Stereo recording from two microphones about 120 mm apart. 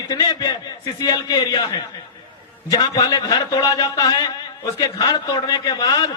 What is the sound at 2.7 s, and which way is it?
A man's voice, 30° left (ahead or behind).